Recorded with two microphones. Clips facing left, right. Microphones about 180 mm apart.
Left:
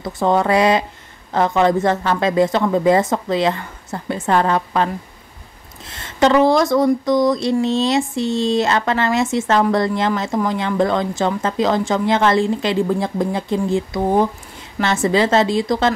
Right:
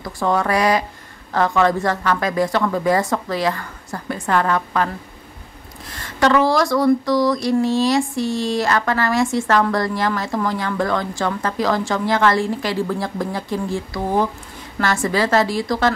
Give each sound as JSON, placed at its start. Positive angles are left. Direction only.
{"t": 0.0, "sound": "speech", "side_deg": 20}